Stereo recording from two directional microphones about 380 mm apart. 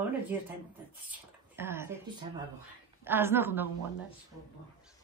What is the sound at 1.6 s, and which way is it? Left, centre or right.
Speech, centre.